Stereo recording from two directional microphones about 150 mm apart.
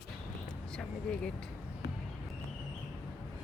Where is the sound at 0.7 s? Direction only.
5° left (ahead or behind).